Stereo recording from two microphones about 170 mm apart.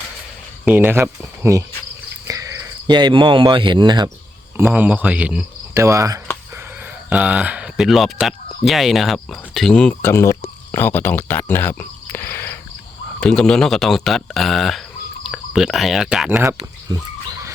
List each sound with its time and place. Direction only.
0.6 s speech: 10° right (ahead or behind); by 4.1 s 25° right (ahead or behind)
4.7 s speech: 10° right (ahead or behind)
5.8 s speech: 20° right (ahead or behind)
7.1 s speech: 5° right (ahead or behind)